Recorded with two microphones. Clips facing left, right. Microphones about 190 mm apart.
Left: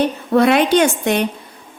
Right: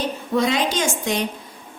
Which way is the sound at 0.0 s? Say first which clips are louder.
Left 7 dB; 65° left (ahead or behind).